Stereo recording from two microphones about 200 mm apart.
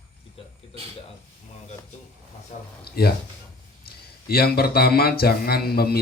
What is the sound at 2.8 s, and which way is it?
Speech, 50° left (ahead or behind).